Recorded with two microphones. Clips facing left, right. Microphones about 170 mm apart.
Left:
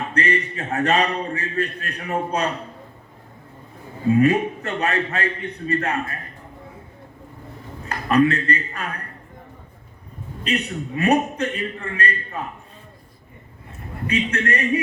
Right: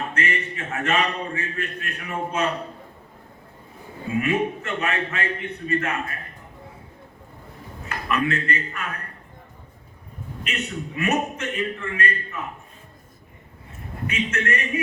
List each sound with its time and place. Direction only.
0.1 s a man's voice: 35° left (ahead or behind)
4.2 s a man's voice: 35° left (ahead or behind)
7.9 s a man's voice: 35° left (ahead or behind)
10.4 s a man's voice: 35° left (ahead or behind)
14.1 s a man's voice: 35° left (ahead or behind)